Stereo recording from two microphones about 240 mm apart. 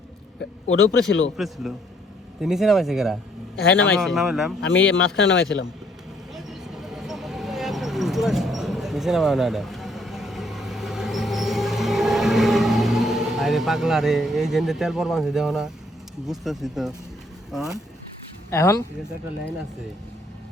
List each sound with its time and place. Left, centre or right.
0.7 s speech: left
2.4 s speech: centre
4.6 s a man's voice: left
6.3 s vehicle: centre
16.2 s speech: centre
18.5 s speech: centre